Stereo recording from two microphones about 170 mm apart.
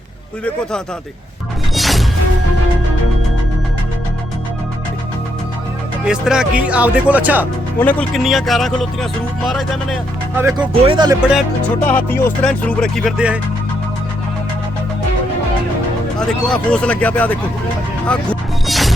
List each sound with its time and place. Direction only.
1.7 s music: centre (ahead or behind)
6.1 s speech: 5° right (ahead or behind)
7.8 s speech: 10° left (ahead or behind)
8.1 s speech: centre (ahead or behind)
10.3 s speech: 15° right (ahead or behind)
10.8 s speech: 25° right (ahead or behind)
11.2 s speech: 5° right (ahead or behind)
11.9 s speech: 10° left (ahead or behind)
13.1 s speech: 5° right (ahead or behind)
16.1 s speech: 5° left (ahead or behind)
18.0 s music: 5° left (ahead or behind)